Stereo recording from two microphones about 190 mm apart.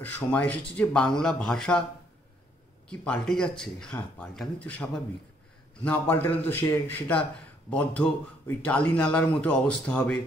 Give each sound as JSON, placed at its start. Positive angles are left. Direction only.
{"t": 0.0, "sound": "speech", "side_deg": 10}
{"t": 2.9, "sound": "a man's voice", "side_deg": 5}